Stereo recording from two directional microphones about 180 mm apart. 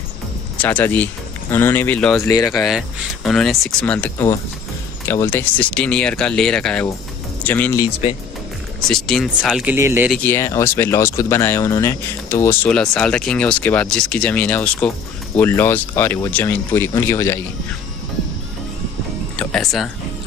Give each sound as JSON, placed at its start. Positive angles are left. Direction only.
{"t": 0.6, "sound": "speech", "side_deg": 10}
{"t": 2.2, "sound": "speech", "side_deg": 20}
{"t": 3.3, "sound": "speech", "side_deg": 0}
{"t": 8.8, "sound": "speech", "side_deg": 0}
{"t": 9.8, "sound": "speech", "side_deg": -15}
{"t": 10.1, "sound": "speech", "side_deg": 15}
{"t": 19.3, "sound": "music", "side_deg": 5}